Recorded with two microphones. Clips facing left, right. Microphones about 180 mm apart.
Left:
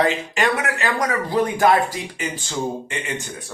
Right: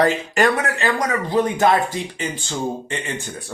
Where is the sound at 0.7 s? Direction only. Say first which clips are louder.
Right 1 dB; 25° right (ahead or behind).